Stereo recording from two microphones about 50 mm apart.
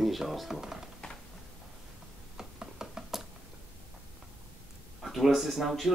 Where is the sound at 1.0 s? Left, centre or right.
Centre.